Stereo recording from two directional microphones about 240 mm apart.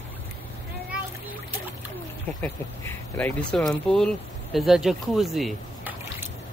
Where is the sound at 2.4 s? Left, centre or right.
Centre.